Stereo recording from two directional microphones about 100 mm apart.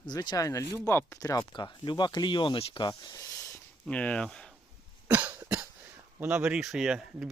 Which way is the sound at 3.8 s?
10° left (ahead or behind).